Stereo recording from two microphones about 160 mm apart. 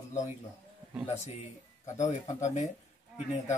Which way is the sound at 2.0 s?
50° left (ahead or behind).